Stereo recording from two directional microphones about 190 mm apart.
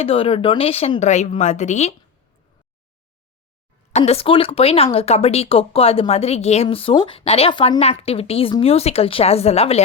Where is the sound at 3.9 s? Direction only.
35° left (ahead or behind).